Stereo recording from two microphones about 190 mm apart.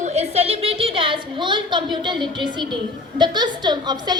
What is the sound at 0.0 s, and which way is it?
A woman's voice, 35° right (ahead or behind).